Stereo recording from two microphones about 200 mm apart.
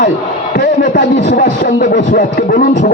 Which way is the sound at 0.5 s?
50° left (ahead or behind).